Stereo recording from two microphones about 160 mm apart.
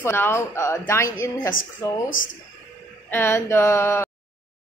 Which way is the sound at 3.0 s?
15° left (ahead or behind).